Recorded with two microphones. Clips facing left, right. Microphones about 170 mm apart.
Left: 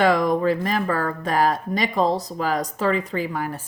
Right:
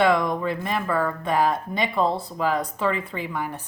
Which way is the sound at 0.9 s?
90° left.